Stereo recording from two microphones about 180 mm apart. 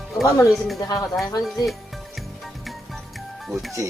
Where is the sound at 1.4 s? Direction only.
Centre (ahead or behind).